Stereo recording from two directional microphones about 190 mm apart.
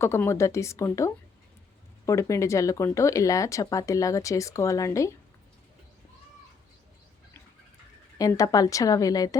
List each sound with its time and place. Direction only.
0.0 s speech: 15° left (ahead or behind)
8.2 s a woman's voice: 20° left (ahead or behind)